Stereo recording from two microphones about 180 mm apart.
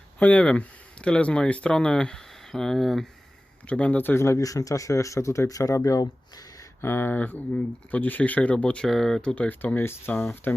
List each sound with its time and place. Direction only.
0.2 s speech: 5° left (ahead or behind)